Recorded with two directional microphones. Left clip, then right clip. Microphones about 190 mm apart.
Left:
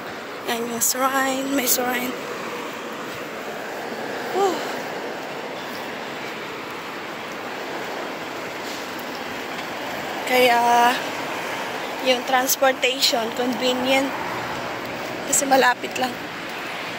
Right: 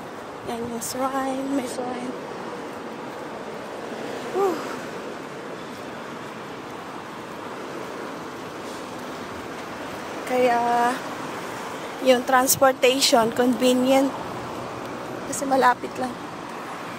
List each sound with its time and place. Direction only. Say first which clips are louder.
0.5 s speech: left 6 dB; 10° right (ahead or behind)
10.3 s speech: left 4 dB; 5° right (ahead or behind)
12.1 s speech: right 2 dB; 30° right (ahead or behind)
15.5 s speech: left 1 dB; 15° right (ahead or behind)